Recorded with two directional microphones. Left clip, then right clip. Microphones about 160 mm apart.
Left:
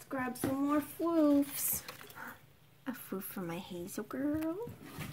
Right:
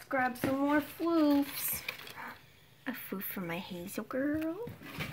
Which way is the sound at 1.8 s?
10° left (ahead or behind).